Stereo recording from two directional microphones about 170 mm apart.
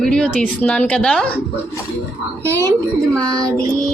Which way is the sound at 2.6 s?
20° right (ahead or behind).